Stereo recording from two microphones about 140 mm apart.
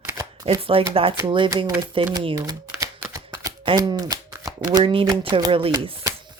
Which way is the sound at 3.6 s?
30° right (ahead or behind).